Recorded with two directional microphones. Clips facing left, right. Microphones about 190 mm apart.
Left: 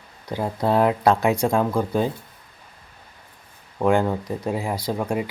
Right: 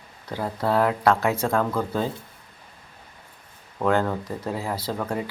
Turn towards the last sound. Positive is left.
turn(degrees=15)  # may be behind; listen again after turning